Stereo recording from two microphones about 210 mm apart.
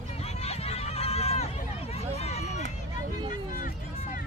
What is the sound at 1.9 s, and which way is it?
Vehicle, 30° left (ahead or behind).